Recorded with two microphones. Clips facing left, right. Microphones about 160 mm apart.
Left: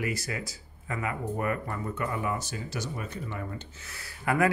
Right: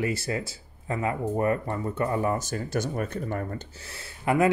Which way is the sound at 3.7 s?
30° right (ahead or behind).